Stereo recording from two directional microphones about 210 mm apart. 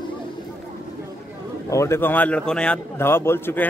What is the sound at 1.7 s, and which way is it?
A man's voice, 15° left (ahead or behind).